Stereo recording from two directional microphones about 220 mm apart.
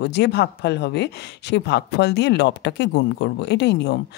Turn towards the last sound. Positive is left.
turn(degrees=50)  # may be behind; listen again after turning